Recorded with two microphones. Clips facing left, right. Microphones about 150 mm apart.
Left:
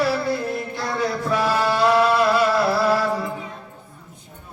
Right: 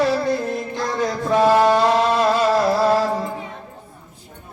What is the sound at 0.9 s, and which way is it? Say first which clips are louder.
Music: right 3 dB; 25° right (ahead or behind).